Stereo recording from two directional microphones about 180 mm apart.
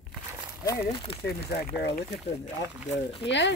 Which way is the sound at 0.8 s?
30° left (ahead or behind).